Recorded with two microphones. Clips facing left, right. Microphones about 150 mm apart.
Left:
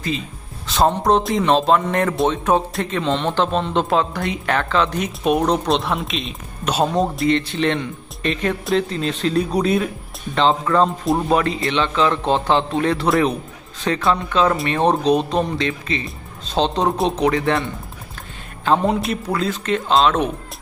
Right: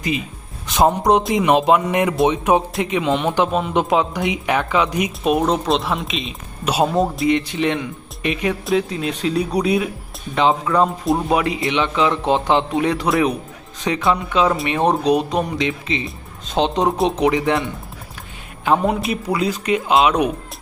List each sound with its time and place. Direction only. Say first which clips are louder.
0.7 s speech: right 1 dB; 15° right (ahead or behind)
14.1 s speech: even; 15° right (ahead or behind)